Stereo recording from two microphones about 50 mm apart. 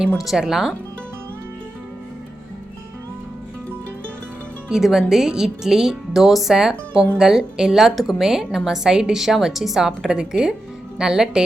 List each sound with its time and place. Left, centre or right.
0.2 s a woman's voice: centre
4.7 s a woman's voice: centre